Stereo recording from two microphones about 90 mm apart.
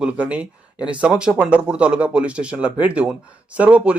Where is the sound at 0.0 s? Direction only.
15° right (ahead or behind).